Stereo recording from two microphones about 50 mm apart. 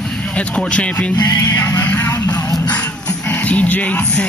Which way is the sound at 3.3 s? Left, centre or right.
Left.